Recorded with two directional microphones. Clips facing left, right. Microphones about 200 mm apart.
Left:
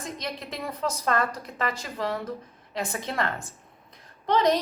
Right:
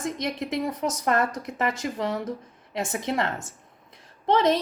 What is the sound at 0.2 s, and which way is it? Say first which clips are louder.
A woman's voice: right 7 dB; 20° right (ahead or behind).